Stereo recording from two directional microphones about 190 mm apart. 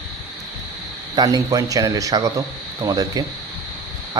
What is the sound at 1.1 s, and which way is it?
Speech, 20° right (ahead or behind).